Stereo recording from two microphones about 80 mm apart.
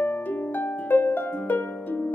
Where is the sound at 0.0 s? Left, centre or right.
Centre.